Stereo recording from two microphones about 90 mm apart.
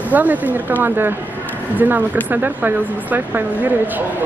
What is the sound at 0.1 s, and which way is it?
Speech, 20° right (ahead or behind).